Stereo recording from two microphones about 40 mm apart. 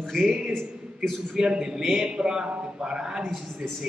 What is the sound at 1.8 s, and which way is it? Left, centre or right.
Speech, centre.